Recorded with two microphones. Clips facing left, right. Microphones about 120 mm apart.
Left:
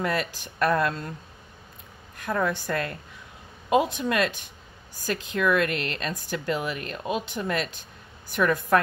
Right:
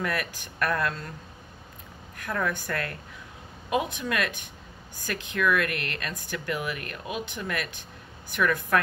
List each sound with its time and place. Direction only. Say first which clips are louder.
0.0 s speech: left 3 dB; 25° left (ahead or behind)
2.1 s speech: left 3 dB; 25° left (ahead or behind)